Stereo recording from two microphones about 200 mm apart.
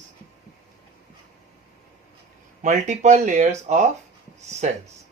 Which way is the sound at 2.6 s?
35° right (ahead or behind).